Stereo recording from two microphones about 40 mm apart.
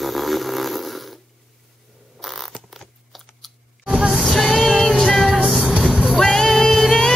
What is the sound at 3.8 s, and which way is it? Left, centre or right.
Music, centre.